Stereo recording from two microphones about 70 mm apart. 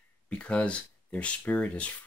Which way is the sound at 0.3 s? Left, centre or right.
Centre.